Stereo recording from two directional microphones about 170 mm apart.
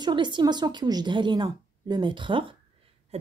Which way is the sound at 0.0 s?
25° right (ahead or behind).